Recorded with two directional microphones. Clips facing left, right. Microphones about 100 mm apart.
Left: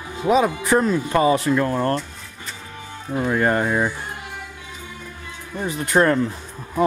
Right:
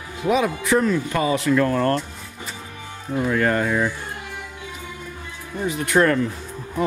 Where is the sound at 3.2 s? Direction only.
25° left (ahead or behind).